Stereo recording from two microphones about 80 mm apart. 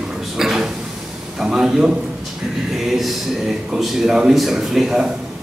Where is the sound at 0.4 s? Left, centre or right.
Centre.